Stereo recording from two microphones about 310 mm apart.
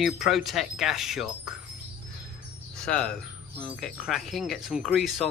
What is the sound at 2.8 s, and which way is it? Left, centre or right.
Speech, centre.